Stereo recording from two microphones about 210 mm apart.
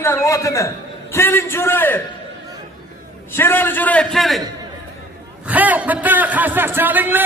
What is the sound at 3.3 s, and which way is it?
A man's voice, 10° left (ahead or behind).